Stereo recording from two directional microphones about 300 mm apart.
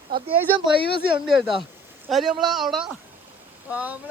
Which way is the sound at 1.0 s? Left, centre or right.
Centre.